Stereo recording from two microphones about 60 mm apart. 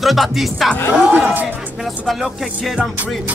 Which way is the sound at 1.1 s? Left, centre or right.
Right.